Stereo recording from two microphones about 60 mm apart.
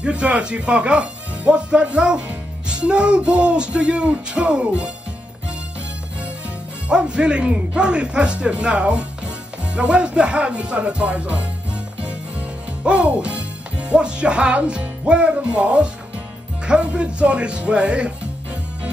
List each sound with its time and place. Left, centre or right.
0.0 s a man's voice: centre
6.9 s a man's voice: centre